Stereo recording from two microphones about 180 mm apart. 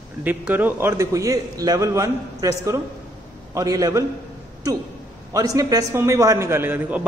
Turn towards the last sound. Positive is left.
turn(degrees=-10)  # may be behind; listen again after turning